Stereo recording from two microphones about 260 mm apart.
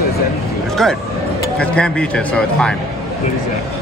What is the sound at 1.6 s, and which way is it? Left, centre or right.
A man's voice, centre.